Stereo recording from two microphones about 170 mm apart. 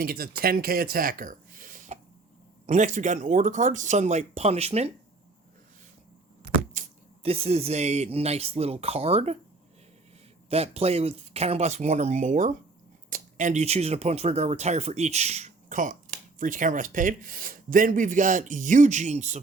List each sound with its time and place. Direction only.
0.0 s speech: 60° right (ahead or behind); by 4.9 s 40° right (ahead or behind)
6.8 s a sound: 45° right (ahead or behind)
7.2 s speech: 35° right (ahead or behind)
10.5 s speech: 40° right (ahead or behind)